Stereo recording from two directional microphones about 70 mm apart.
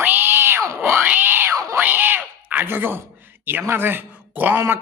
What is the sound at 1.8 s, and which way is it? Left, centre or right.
A man's voice, right.